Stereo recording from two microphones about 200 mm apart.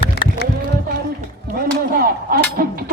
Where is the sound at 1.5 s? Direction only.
45° right (ahead or behind).